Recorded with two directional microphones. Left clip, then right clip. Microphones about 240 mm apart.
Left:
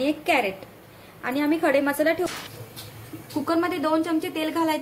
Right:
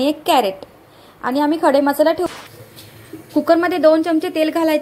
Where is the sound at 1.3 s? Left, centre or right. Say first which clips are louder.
Right 7 dB; centre.